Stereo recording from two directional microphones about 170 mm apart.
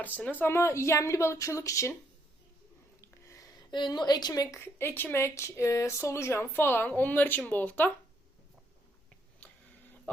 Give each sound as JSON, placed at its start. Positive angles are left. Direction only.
{"t": 0.0, "sound": "speech", "side_deg": 10}
{"t": 3.0, "sound": "speech", "side_deg": 20}